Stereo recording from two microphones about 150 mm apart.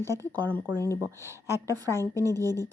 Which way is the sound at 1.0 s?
20° right (ahead or behind).